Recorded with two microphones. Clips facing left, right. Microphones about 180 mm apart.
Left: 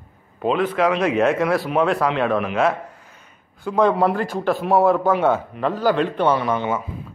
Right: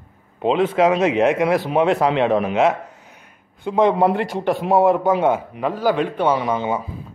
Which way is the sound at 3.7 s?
20° right (ahead or behind).